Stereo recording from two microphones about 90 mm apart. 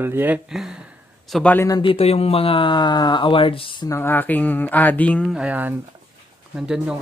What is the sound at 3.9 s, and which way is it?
Speech, 25° left (ahead or behind).